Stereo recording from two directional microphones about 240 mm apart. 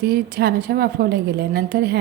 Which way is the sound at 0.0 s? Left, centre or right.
Right.